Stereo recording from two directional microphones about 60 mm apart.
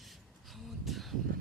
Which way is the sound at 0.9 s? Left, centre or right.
Centre.